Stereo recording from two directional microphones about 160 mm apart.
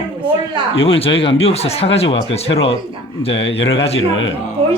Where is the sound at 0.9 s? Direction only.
35° left (ahead or behind).